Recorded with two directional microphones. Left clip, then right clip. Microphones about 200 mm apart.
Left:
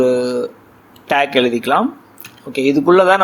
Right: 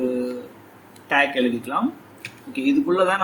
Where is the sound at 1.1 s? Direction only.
45° left (ahead or behind).